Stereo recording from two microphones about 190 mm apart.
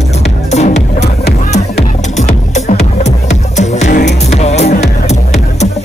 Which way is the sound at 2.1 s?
40° left (ahead or behind).